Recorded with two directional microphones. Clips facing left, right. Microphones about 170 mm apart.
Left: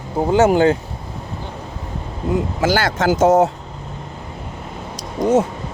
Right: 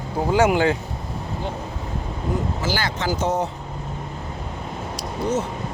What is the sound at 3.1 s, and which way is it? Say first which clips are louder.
Speech: left 12 dB; 90° left.